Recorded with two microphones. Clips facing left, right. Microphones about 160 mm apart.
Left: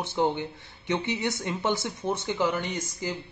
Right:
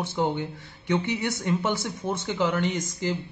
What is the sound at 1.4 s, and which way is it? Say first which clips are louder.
Speech: right 2 dB; 15° left (ahead or behind).